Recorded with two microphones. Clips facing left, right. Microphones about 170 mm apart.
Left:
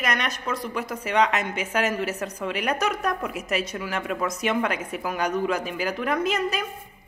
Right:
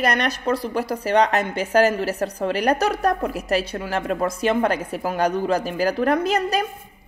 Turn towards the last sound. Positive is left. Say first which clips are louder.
# right 4 dB
turn(degrees=-35)  # may be behind; listen again after turning